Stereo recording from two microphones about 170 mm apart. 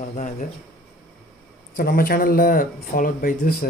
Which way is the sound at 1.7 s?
55° left (ahead or behind).